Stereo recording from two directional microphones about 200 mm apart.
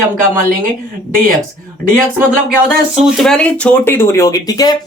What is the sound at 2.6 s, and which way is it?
Speech, centre (ahead or behind).